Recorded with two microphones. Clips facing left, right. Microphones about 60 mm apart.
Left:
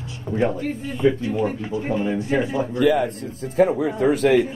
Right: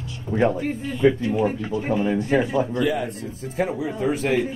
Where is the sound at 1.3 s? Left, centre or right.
Centre.